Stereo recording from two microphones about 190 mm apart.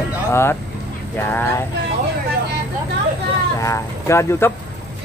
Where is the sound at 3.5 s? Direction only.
15° left (ahead or behind).